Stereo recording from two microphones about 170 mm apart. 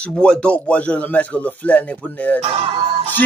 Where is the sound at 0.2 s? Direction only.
5° left (ahead or behind).